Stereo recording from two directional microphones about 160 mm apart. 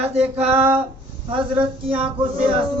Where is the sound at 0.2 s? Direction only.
10° right (ahead or behind).